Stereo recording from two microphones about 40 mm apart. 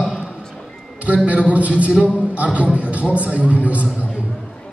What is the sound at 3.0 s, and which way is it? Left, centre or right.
Speech, right.